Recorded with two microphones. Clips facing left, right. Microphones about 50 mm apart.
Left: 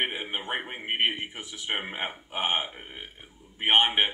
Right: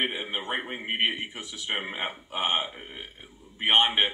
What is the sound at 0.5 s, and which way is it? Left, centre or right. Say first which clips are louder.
Speech: right 1 dB; centre.